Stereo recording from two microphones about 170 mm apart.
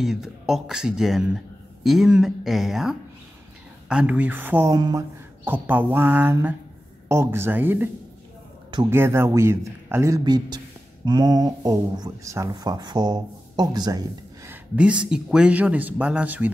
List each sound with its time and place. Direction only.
0.0 s a man's voice: centre (ahead or behind)
4.7 s speech: 25° right (ahead or behind)
5.4 s speech: 10° right (ahead or behind)
8.9 s speech: 15° right (ahead or behind)
14.8 s speech: 5° right (ahead or behind)